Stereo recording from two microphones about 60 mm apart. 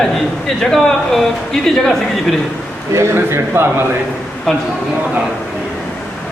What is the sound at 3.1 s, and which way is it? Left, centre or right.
Speech, right.